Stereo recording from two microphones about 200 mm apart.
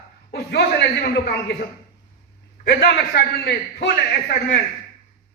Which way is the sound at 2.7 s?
55° left (ahead or behind).